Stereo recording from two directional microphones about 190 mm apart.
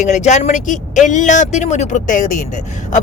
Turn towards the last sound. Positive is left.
turn(degrees=40)  # may be behind; listen again after turning